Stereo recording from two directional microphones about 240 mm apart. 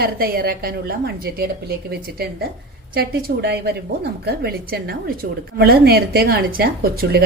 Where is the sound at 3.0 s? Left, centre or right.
Right.